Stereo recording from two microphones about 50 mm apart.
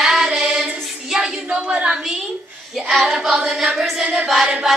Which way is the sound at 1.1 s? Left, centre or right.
Centre.